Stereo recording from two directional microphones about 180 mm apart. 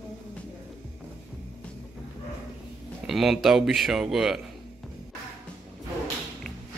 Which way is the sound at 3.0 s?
Centre (ahead or behind).